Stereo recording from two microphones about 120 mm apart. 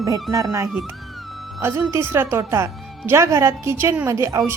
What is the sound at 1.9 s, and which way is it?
A woman's voice, 20° right (ahead or behind).